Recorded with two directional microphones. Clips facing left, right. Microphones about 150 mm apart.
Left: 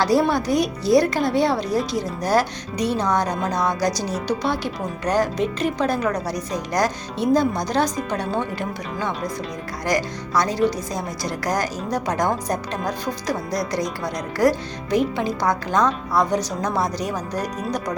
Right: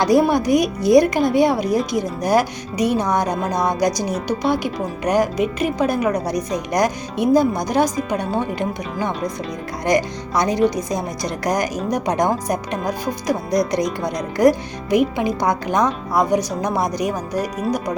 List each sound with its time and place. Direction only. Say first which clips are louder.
0.0 s a woman's voice: right 3 dB; 20° right (ahead or behind)